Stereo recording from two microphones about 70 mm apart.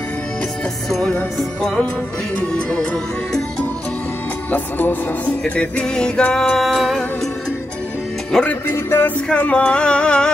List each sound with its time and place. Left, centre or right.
0.8 s music: centre
2.7 s music: centre
4.5 s speech: left
5.4 s music: centre
8.5 s music: left
9.3 s music: centre